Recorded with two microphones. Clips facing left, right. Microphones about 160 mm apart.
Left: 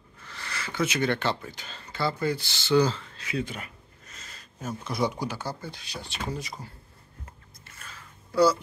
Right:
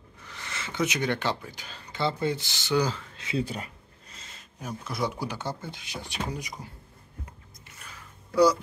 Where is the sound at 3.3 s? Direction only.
35° right (ahead or behind).